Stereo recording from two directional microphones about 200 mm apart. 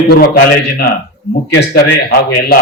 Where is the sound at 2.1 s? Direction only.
50° left (ahead or behind).